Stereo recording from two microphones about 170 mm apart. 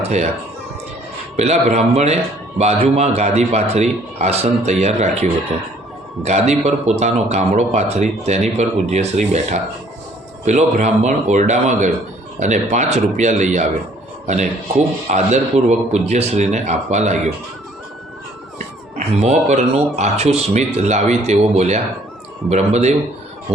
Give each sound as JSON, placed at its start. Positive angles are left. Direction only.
{"t": 0.0, "sound": "speech", "side_deg": -40}
{"t": 1.4, "sound": "speech", "side_deg": -40}
{"t": 18.9, "sound": "speech", "side_deg": -40}